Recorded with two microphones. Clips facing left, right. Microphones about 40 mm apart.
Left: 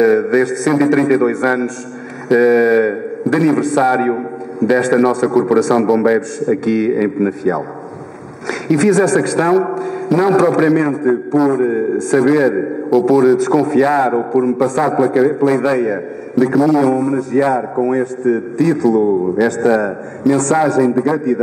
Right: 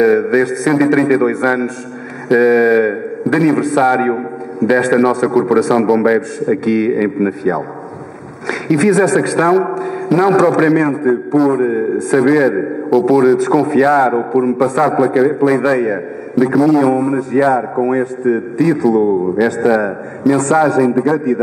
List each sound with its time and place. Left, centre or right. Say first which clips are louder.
0.0 s a man's voice: right 1 dB; centre
8.6 s a man's voice: right 1 dB; centre
9.8 s a sound: right 1 dB; centre
10.3 s a man's voice: even; centre
10.6 s a man's voice: right 1 dB; centre